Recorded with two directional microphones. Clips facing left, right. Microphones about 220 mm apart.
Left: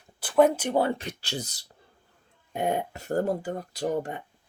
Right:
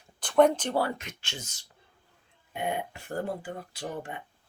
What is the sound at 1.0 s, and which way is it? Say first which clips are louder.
Speech: left 8 dB; 35° left (ahead or behind).